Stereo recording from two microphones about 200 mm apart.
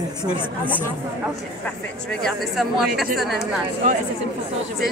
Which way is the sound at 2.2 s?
Centre (ahead or behind).